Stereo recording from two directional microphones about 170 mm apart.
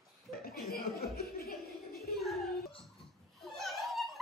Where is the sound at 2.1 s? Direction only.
Centre (ahead or behind).